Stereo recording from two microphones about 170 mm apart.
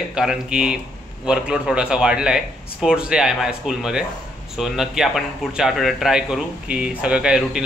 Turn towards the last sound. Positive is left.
turn(degrees=-5)  # may be behind; listen again after turning